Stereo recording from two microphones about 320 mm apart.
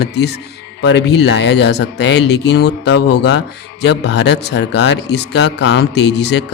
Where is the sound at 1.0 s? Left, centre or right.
Left.